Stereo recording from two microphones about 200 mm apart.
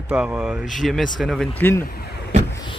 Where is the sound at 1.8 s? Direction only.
50° left (ahead or behind).